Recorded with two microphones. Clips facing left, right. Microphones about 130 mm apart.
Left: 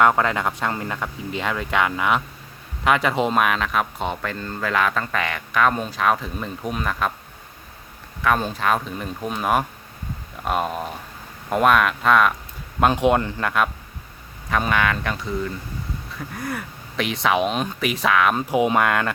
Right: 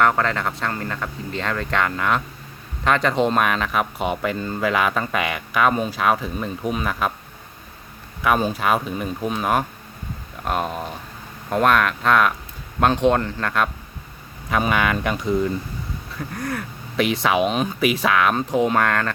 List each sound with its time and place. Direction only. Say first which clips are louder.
0.0 s speech: left 1 dB; 15° left (ahead or behind); by 7.1 s 5° right (ahead or behind)
8.2 s speech: right 1 dB; 10° right (ahead or behind)
14.5 s speech: right 1 dB; 5° right (ahead or behind)
16.1 s speech: right 2 dB; 5° left (ahead or behind)